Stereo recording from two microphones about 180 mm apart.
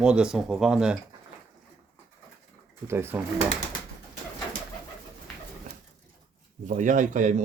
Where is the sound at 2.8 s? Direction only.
10° right (ahead or behind).